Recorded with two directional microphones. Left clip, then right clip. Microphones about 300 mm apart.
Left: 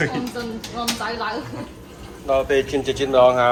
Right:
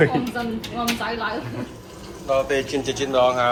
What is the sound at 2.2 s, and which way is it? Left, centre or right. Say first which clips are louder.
Speech: left 2 dB; centre.